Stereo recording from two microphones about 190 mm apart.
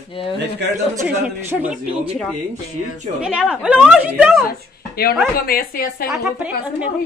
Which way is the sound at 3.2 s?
5° right (ahead or behind).